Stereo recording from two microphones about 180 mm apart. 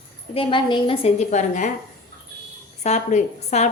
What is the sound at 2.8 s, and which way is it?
Speech, 40° left (ahead or behind).